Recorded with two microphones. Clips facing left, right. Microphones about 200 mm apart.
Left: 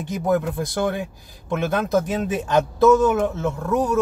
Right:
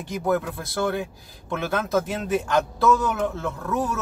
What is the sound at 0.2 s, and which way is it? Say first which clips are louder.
Speech: left 3 dB; 15° left (ahead or behind).